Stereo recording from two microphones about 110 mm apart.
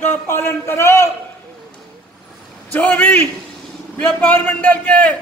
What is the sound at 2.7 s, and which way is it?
A man's voice, 15° left (ahead or behind).